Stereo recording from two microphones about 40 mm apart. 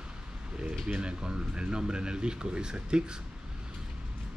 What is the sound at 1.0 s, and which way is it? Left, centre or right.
Speech, right.